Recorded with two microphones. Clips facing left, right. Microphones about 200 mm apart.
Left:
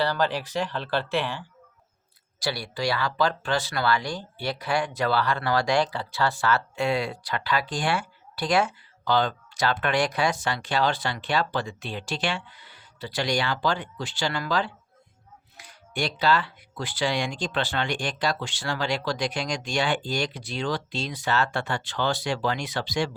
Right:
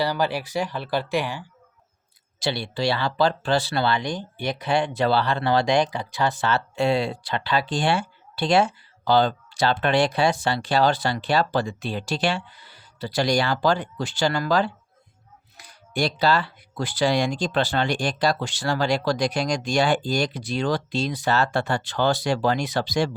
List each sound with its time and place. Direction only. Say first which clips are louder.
0.0 s speech: right 1 dB; 10° right (ahead or behind)
2.4 s speech: right 3 dB; 25° right (ahead or behind); by 23.1 s 40° right (ahead or behind)